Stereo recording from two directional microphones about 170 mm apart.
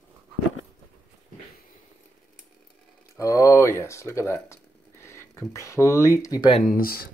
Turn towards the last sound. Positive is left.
turn(degrees=60)  # may be behind; listen again after turning